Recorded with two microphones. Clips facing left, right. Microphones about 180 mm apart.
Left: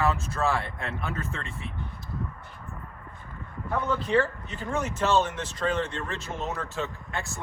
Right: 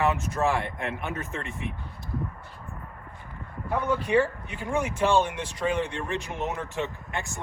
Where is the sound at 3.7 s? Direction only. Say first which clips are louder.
Right 1 dB; 15° right (ahead or behind).